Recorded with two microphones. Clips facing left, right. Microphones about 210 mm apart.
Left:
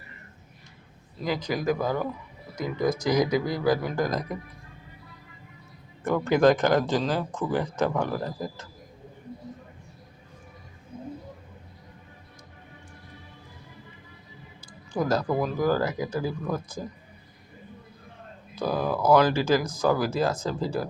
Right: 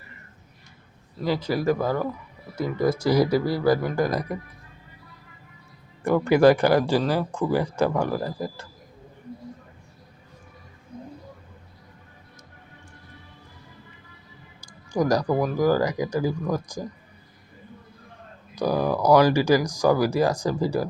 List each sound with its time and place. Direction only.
1.4 s speech: 5° right (ahead or behind)
6.1 s speech: 10° right (ahead or behind)
14.6 s a sound: 15° right (ahead or behind)
15.6 s speech: 15° right (ahead or behind)
18.5 s speech: 15° right (ahead or behind)